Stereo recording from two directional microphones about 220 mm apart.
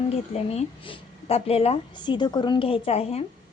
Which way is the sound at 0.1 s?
30° left (ahead or behind).